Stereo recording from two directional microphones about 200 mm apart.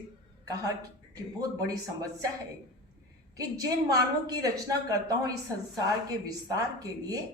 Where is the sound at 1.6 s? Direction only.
15° right (ahead or behind).